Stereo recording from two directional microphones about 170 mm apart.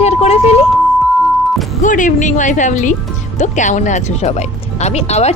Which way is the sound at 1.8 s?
50° left (ahead or behind).